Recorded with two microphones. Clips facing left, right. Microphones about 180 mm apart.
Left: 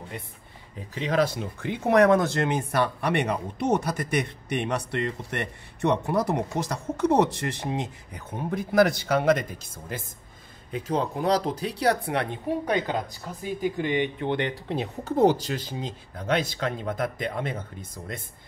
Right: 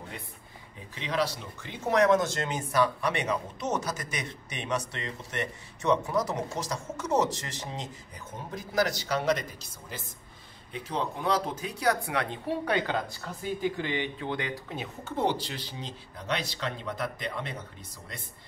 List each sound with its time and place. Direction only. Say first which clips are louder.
1.0 s speech: left 6 dB; 50° left (ahead or behind); by 12.3 s 30° left (ahead or behind)
12.3 s a woman's voice: left 3 dB; 15° left (ahead or behind)
14.2 s speech: left 6 dB; 30° left (ahead or behind); by 18.2 s 50° left (ahead or behind)